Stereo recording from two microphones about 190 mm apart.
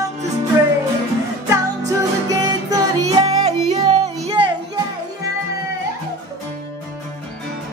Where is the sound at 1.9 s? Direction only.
20° right (ahead or behind).